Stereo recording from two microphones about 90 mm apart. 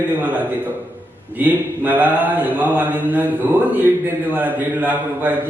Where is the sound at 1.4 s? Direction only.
20° right (ahead or behind).